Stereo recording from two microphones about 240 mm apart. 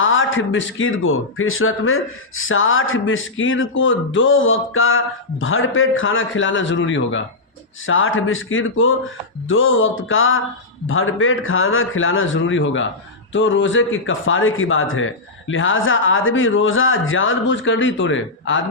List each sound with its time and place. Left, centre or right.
0.0 s a man's voice: left